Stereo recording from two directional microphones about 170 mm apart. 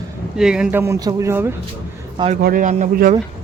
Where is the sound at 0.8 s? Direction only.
20° right (ahead or behind).